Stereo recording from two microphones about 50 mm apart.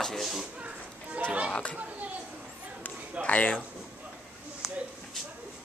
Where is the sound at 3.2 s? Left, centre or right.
Left.